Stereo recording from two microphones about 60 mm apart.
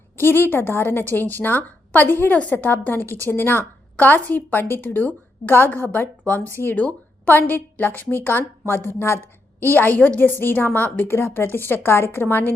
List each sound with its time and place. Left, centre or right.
0.2 s a woman's voice: left
2.0 s a woman's voice: left
2.3 s a woman's voice: left
6.2 s speech: left
6.6 s a woman's voice: left
9.6 s a woman's voice: left
11.1 s a woman's voice: left